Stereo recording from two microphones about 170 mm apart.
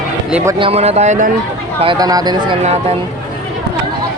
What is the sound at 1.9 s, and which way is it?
Speech, 20° right (ahead or behind).